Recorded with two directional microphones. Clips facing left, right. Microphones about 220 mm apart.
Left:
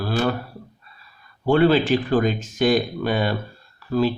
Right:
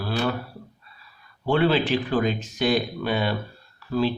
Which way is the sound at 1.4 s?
45° left (ahead or behind).